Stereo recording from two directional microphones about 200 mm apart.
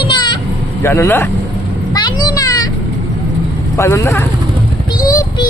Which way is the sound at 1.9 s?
20° left (ahead or behind).